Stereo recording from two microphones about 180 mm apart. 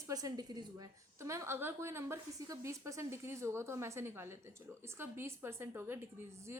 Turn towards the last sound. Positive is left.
turn(degrees=-15)  # may be behind; listen again after turning